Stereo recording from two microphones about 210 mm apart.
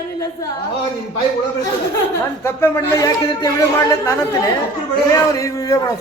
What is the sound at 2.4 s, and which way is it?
Speech, 10° left (ahead or behind).